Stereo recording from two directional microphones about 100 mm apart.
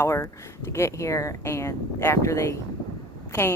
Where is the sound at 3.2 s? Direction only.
25° left (ahead or behind).